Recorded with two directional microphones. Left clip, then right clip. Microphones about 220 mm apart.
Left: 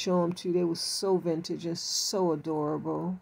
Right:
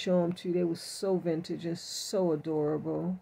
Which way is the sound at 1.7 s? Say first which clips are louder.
Left 8 dB; 25° right (ahead or behind).